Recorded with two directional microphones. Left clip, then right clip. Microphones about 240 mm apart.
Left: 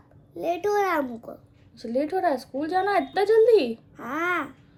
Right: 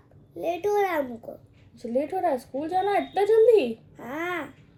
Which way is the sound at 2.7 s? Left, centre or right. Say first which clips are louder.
Left 1 dB; centre.